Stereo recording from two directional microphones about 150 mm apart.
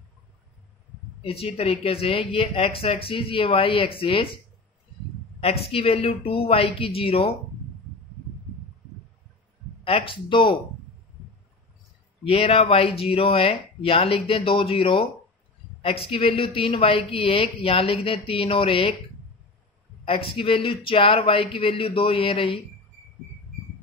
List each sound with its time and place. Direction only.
1.2 s a woman's voice: 40° left (ahead or behind)
5.4 s a woman's voice: 40° left (ahead or behind)
9.8 s a woman's voice: 35° left (ahead or behind)
12.3 s a woman's voice: 40° left (ahead or behind)
20.1 s a woman's voice: 35° left (ahead or behind)